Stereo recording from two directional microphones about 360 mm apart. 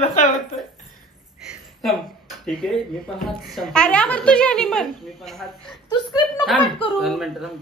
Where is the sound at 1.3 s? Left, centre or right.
Centre.